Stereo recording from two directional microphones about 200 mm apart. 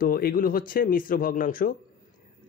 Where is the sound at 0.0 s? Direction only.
45° left (ahead or behind).